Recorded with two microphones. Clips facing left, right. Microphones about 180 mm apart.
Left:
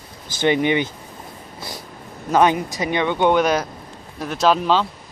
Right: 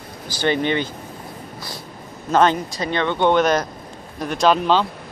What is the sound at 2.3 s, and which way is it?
Speech, 15° left (ahead or behind).